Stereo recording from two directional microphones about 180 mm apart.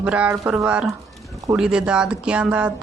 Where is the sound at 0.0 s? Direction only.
5° right (ahead or behind).